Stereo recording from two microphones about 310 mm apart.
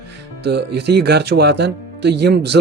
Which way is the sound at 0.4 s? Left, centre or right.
Right.